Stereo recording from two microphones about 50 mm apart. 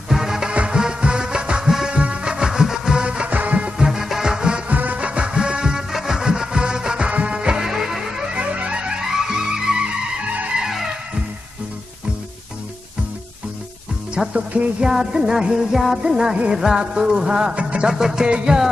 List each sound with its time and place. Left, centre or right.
0.1 s music: centre
4.6 s music: right; by 8.3 s centre
8.4 s music: right
9.0 s music: centre
10.6 s music: centre
14.3 s music: right
14.8 s music: centre
17.9 s music: centre